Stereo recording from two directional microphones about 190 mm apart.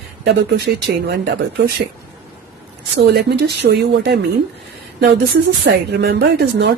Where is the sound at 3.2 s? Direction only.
60° right (ahead or behind).